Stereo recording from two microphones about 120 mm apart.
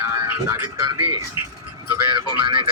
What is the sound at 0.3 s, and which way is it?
Speech, 20° right (ahead or behind).